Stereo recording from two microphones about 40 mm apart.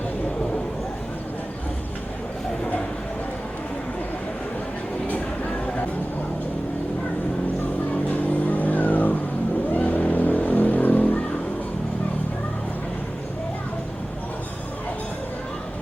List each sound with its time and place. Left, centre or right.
8.3 s vehicle: left